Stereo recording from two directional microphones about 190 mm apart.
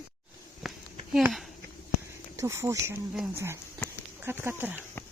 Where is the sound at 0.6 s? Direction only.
Centre (ahead or behind).